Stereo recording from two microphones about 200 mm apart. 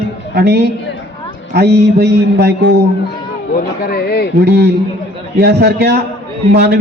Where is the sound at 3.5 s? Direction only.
50° left (ahead or behind).